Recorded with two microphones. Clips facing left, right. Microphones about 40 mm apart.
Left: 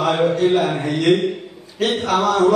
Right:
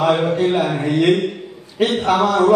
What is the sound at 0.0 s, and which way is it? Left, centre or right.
A man's voice, centre.